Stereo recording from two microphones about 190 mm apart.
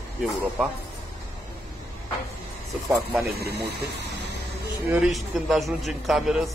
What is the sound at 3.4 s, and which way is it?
Speech, 60° right (ahead or behind).